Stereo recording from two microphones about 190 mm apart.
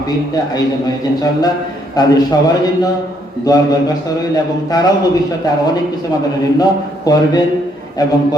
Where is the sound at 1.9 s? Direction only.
20° left (ahead or behind).